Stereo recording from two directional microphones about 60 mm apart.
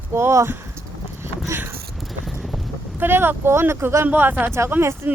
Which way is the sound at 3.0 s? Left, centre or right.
Right.